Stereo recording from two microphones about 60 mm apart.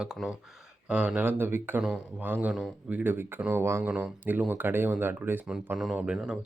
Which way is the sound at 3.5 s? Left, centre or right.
Right.